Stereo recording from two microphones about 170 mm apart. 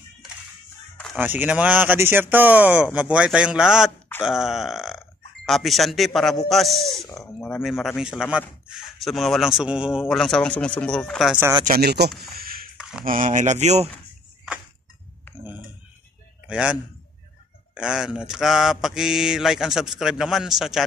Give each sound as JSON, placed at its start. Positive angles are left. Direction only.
{"t": 1.1, "sound": "speech", "side_deg": -10}
{"t": 6.5, "sound": "mantra", "side_deg": 0}
{"t": 11.6, "sound": "speech", "side_deg": -65}
{"t": 12.4, "sound": "a sound", "side_deg": -60}
{"t": 12.7, "sound": "a sound", "side_deg": -5}
{"t": 13.0, "sound": "speech", "side_deg": -50}
{"t": 16.4, "sound": "a man's voice", "side_deg": -5}
{"t": 17.7, "sound": "mantra", "side_deg": -5}